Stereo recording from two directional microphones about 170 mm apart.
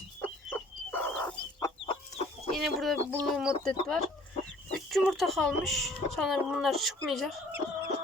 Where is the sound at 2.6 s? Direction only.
Centre (ahead or behind).